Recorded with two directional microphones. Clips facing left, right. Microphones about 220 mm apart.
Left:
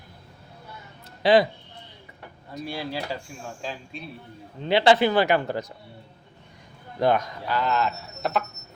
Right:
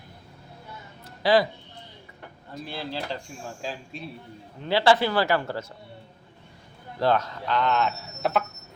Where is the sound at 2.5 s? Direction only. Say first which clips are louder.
Left 2 dB; 15° left (ahead or behind).